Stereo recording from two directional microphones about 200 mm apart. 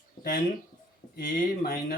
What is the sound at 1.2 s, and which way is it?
Speech, 50° left (ahead or behind).